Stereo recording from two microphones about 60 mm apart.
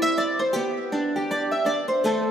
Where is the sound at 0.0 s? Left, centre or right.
Centre.